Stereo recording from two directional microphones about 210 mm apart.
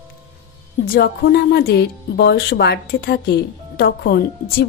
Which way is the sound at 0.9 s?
50° left (ahead or behind).